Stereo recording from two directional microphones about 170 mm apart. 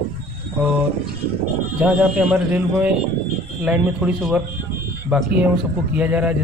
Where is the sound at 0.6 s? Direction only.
5° right (ahead or behind).